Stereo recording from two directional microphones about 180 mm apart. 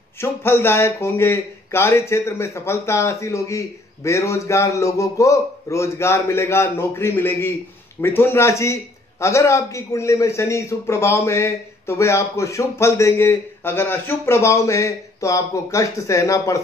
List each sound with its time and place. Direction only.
0.2 s a man's voice: 15° left (ahead or behind)